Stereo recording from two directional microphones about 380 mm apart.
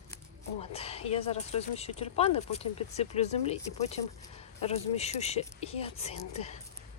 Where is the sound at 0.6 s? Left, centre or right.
Centre.